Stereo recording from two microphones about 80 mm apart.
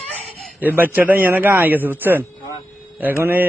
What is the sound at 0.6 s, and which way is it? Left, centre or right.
Speech, right.